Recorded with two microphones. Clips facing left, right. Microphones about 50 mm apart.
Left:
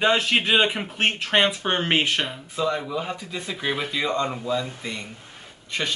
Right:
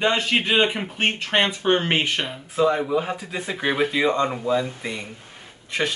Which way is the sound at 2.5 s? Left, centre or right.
Right.